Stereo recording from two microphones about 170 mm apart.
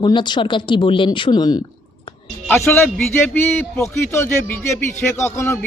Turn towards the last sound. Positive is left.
turn(degrees=15)  # may be behind; listen again after turning